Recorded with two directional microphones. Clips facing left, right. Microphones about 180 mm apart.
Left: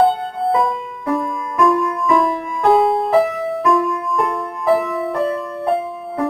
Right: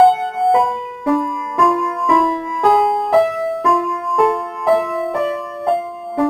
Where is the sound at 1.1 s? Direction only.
Centre (ahead or behind).